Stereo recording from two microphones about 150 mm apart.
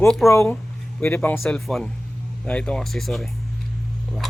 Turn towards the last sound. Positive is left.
turn(degrees=0)  # may be behind; listen again after turning